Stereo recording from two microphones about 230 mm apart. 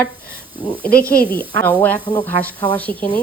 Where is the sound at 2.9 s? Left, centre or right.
Centre.